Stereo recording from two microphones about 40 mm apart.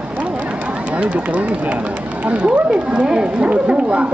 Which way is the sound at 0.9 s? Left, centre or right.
Right.